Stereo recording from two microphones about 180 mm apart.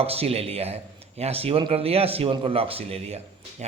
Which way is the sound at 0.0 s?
35° right (ahead or behind).